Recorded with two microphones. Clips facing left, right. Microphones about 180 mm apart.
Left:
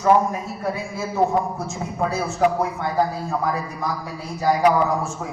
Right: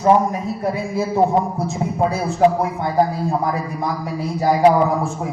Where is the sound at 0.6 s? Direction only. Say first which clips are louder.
Right 6 dB; 35° right (ahead or behind).